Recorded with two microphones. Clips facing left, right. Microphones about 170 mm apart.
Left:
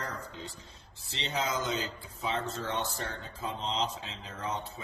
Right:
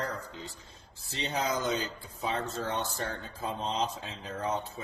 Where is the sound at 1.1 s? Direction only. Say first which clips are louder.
Right 2 dB; 45° right (ahead or behind).